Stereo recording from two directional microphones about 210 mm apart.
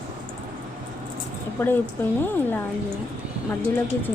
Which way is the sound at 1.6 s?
10° left (ahead or behind).